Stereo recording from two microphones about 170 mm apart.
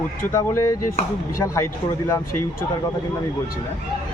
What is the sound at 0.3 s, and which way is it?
Speech, 15° left (ahead or behind).